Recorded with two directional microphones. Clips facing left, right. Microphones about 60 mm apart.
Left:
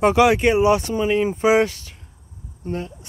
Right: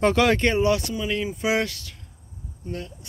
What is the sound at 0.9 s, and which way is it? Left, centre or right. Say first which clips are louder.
Speech: left 7 dB; left.